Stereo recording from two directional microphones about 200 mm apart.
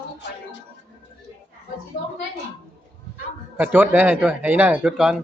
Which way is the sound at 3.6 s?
10° right (ahead or behind).